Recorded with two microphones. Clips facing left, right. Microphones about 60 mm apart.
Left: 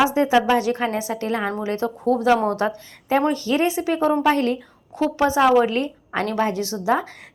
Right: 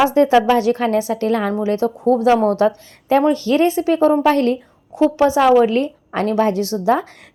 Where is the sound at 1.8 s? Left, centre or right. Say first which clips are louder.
Right 4 dB; right.